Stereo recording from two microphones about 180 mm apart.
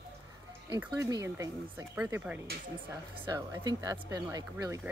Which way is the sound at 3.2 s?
20° right (ahead or behind).